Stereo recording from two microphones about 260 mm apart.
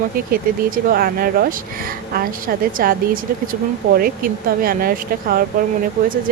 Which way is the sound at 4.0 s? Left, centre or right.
Right.